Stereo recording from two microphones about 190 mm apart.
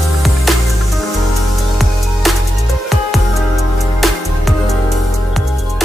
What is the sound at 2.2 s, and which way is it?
Music, centre (ahead or behind).